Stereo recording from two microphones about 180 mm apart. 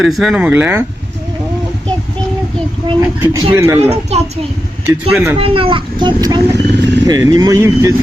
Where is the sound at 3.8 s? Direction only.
35° right (ahead or behind).